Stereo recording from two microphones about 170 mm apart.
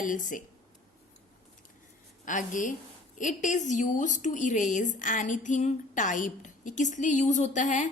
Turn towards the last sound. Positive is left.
turn(degrees=45)  # may be behind; listen again after turning